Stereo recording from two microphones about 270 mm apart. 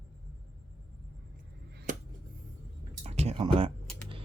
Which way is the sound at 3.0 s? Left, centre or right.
Right.